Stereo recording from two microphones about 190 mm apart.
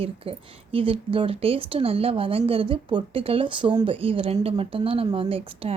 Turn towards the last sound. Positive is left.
turn(degrees=-30)  # may be behind; listen again after turning